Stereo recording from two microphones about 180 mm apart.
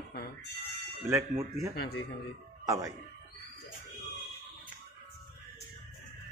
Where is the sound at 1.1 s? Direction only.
15° right (ahead or behind).